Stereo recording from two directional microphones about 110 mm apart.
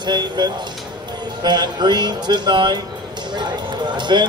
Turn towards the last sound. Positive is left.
turn(degrees=-45)  # may be behind; listen again after turning